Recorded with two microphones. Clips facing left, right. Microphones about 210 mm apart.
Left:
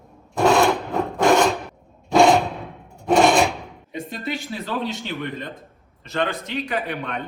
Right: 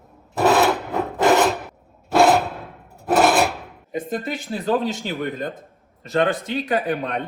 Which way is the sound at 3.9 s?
45° right (ahead or behind).